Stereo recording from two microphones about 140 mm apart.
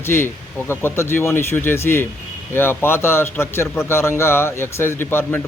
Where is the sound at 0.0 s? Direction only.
15° left (ahead or behind).